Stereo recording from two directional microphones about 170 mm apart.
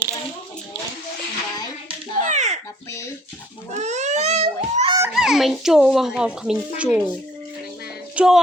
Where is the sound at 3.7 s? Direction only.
45° right (ahead or behind).